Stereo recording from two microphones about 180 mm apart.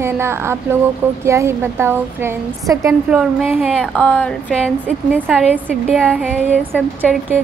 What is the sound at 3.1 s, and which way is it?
Speech, 5° right (ahead or behind).